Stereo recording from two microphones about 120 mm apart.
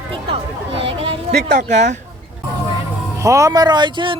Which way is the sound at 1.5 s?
80° right.